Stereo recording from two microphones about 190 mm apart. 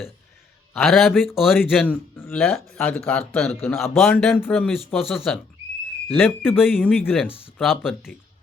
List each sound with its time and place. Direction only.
0.7 s speech: centre (ahead or behind)
7.3 s speech: 30° left (ahead or behind)